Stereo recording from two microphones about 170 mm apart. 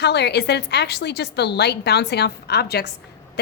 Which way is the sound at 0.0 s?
80° left.